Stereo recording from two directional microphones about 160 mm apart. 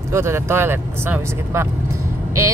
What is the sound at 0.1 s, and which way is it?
Speech, 15° right (ahead or behind).